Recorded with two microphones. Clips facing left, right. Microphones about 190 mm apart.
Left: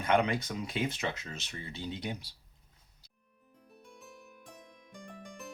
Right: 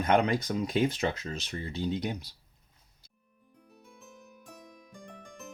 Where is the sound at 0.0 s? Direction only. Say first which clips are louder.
Right 3 dB; 40° right (ahead or behind).